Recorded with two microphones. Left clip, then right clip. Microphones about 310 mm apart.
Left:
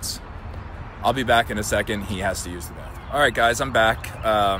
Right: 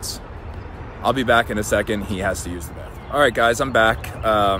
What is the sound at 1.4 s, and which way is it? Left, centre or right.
Speech, centre.